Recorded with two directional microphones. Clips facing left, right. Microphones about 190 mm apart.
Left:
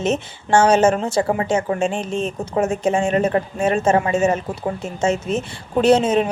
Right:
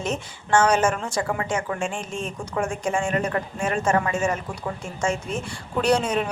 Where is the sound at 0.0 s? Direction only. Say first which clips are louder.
Left 7 dB; 25° left (ahead or behind).